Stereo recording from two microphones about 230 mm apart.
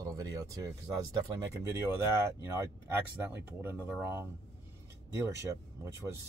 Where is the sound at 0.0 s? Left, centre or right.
Centre.